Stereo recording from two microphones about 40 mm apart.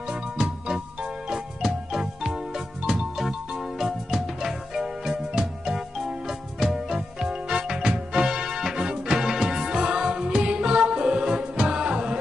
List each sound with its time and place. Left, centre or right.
0.1 s music: centre